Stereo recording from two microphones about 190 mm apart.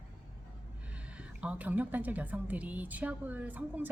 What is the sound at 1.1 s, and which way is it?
Speech, 5° right (ahead or behind).